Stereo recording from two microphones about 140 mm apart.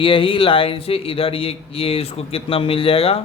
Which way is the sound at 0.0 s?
40° left (ahead or behind).